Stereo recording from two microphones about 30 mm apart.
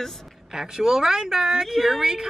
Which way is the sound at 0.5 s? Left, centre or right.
Centre.